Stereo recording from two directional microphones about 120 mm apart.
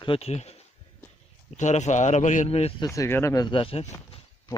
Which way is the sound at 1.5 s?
75° left (ahead or behind).